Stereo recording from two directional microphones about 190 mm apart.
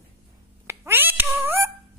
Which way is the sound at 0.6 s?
10° right (ahead or behind).